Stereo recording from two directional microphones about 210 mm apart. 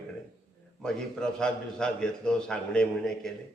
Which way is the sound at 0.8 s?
5° left (ahead or behind).